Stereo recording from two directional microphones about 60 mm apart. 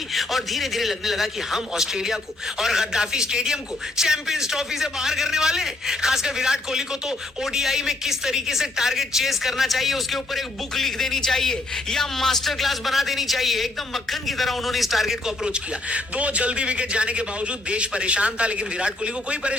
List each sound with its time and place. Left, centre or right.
0.1 s a man's voice: centre
15.5 s a man's voice: right